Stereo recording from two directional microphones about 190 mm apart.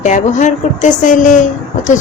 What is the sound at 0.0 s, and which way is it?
Speech, 40° left (ahead or behind).